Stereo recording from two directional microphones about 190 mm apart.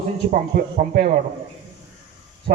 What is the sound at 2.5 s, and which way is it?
Speech, 50° right (ahead or behind).